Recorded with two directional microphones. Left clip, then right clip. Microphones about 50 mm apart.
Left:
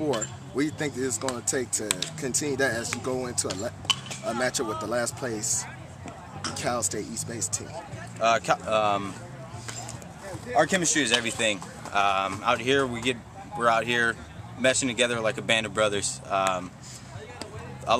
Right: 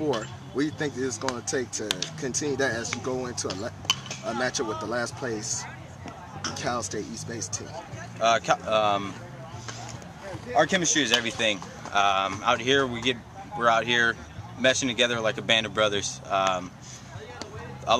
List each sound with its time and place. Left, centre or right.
0.0 s speech: left
3.9 s a sound: left
4.7 s speech: left
8.2 s speech: centre
10.2 s speech: centre
11.9 s speech: centre
17.9 s a man's voice: centre